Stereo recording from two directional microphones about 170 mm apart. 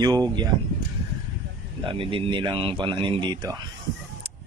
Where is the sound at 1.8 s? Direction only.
30° right (ahead or behind).